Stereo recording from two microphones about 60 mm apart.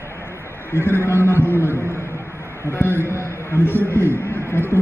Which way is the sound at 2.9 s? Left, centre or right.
Right.